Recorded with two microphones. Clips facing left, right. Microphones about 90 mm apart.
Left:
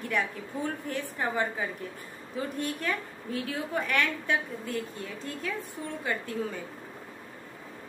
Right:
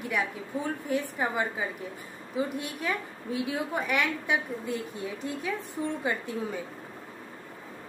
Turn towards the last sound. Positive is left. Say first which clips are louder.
# right 2 dB
turn(degrees=-20)  # may be behind; listen again after turning